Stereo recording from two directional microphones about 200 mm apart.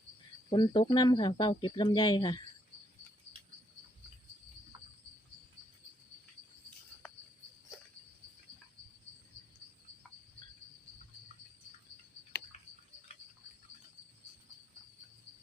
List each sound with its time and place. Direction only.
0.5 s speech: 25° left (ahead or behind)